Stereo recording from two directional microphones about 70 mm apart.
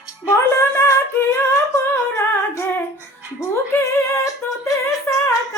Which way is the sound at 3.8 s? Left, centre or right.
Left.